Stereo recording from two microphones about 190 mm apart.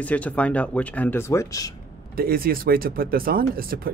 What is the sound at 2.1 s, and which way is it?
Speech, 50° right (ahead or behind).